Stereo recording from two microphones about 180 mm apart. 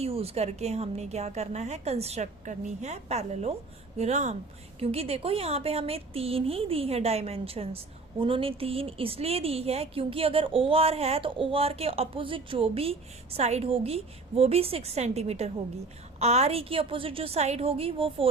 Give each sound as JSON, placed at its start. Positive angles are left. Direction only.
{"t": 0.0, "sound": "a woman's voice", "side_deg": -35}